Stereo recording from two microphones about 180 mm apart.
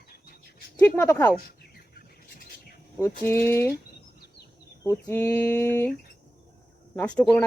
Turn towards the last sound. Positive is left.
turn(degrees=5)  # may be behind; listen again after turning